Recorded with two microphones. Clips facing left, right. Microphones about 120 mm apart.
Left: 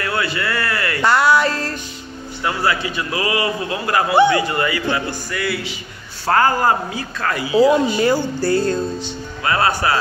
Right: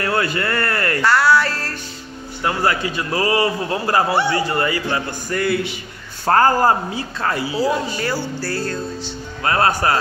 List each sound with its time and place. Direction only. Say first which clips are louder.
0.0 s a sound: right 2 dB; 45° right (ahead or behind)
1.0 s music: left 1 dB; 20° left (ahead or behind)
2.4 s a man's voice: right 1 dB; 40° right (ahead or behind)
7.5 s speech: left 12 dB; 20° left (ahead or behind)
9.4 s speech: right 1 dB; 40° right (ahead or behind)